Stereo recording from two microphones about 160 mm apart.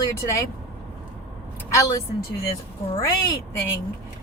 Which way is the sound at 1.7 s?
20° left (ahead or behind).